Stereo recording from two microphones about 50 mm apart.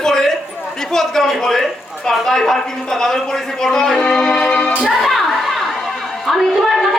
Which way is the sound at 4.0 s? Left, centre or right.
Left.